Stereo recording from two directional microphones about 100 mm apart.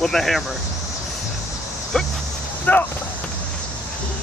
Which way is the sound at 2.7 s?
15° left (ahead or behind).